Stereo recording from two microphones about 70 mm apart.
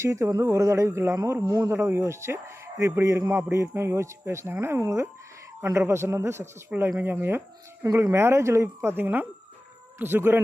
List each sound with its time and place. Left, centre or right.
0.0 s a woman's voice: right